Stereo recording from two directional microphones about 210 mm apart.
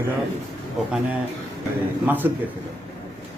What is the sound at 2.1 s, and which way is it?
Speech, 10° right (ahead or behind).